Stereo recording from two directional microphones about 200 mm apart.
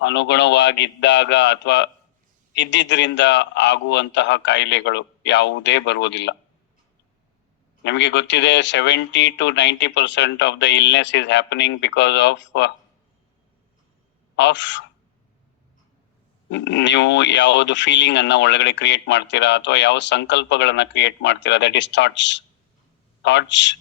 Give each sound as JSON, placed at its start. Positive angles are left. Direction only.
{"t": 0.0, "sound": "speech", "side_deg": 60}
{"t": 7.9, "sound": "speech", "side_deg": 65}
{"t": 14.3, "sound": "speech", "side_deg": 65}
{"t": 16.5, "sound": "speech", "side_deg": 60}